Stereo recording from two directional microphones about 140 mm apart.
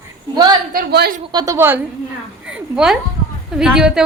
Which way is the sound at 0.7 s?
90° right.